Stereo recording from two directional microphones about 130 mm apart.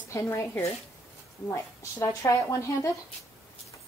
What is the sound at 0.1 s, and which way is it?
Speech, 20° left (ahead or behind).